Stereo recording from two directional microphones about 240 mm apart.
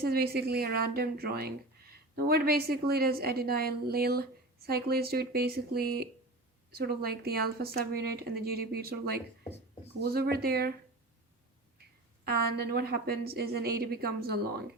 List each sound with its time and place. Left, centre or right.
0.0 s a woman's voice: right
12.2 s a woman's voice: right